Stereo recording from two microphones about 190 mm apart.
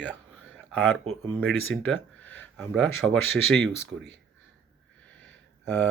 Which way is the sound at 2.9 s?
90° left.